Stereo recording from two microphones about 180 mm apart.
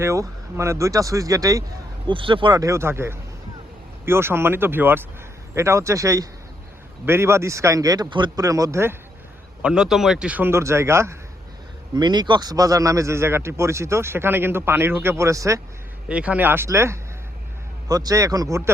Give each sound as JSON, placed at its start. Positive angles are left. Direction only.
{"t": 0.0, "sound": "a man's voice", "side_deg": -15}
{"t": 2.0, "sound": "a man's voice", "side_deg": -30}
{"t": 16.0, "sound": "a man's voice", "side_deg": -5}